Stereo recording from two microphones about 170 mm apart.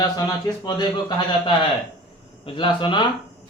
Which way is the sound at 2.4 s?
30° left (ahead or behind).